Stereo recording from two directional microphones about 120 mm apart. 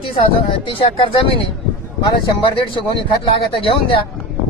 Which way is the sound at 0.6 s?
45° left (ahead or behind).